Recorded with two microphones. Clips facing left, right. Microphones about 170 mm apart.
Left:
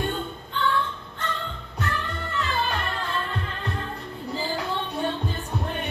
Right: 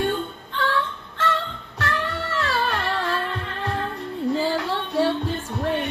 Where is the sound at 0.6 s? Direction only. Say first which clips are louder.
Right 1 dB; 90° right.